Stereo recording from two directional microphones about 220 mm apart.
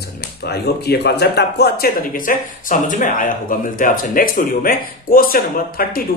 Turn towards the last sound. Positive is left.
turn(degrees=40)  # may be behind; listen again after turning